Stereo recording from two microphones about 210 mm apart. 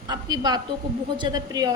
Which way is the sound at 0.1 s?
20° right (ahead or behind).